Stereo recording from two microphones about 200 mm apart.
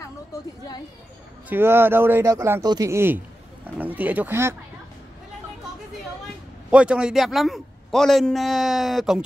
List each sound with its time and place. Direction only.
0.0 s a sound: 15° left (ahead or behind)
1.5 s a man's voice: 10° right (ahead or behind)
6.7 s a man's voice: 5° right (ahead or behind)